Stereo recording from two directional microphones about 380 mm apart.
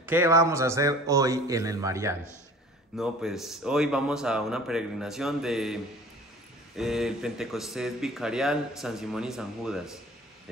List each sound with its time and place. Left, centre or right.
0.0 s a man's voice: centre
6.8 s speech: centre